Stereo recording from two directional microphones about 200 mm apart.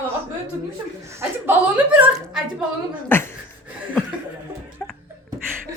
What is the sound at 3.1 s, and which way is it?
Speech, 10° left (ahead or behind).